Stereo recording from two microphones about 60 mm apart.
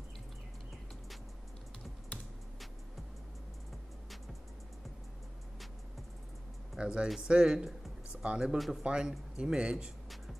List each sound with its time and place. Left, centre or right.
6.8 s speech: centre
8.5 s speech: centre
8.8 s speech: centre